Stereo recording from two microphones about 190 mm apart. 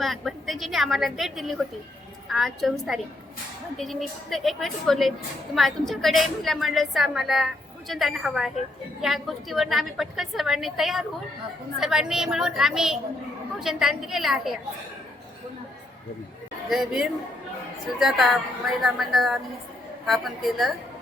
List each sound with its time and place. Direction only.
0.0 s a woman's voice: centre (ahead or behind)
16.6 s a woman's voice: centre (ahead or behind)